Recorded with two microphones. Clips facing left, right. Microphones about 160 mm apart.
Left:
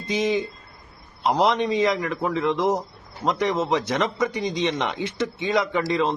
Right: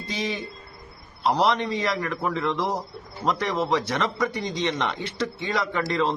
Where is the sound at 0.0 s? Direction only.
20° left (ahead or behind).